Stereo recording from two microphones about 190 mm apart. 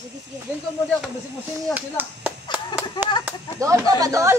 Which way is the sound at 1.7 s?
10° right (ahead or behind).